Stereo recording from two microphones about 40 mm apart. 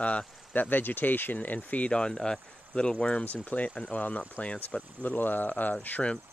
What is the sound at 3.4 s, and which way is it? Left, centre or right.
Speech, left.